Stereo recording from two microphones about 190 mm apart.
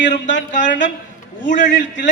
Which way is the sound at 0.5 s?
40° left (ahead or behind).